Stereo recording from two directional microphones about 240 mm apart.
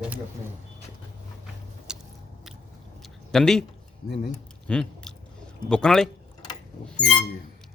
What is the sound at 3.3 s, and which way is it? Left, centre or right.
Speech, centre.